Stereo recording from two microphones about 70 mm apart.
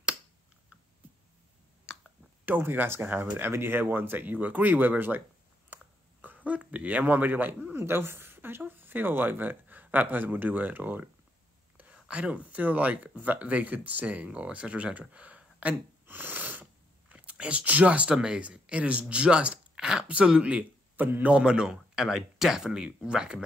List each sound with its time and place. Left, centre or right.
2.4 s speech: right
6.2 s a sound: right
7.7 s a woman's voice: right
21.3 s speech: centre